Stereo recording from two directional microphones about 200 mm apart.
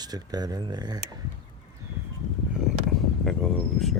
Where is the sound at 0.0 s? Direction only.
20° right (ahead or behind).